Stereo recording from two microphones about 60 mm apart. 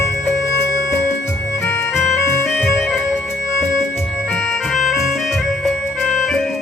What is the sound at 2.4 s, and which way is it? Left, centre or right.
Music, centre.